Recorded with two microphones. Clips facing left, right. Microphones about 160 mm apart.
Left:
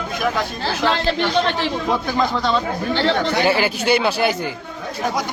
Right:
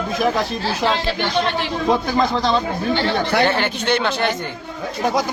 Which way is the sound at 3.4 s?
5° left (ahead or behind).